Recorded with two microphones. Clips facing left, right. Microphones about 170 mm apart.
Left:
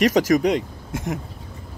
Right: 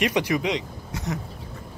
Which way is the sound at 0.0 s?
40° left (ahead or behind).